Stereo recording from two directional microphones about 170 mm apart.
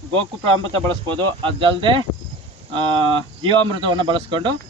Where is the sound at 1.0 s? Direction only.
30° right (ahead or behind).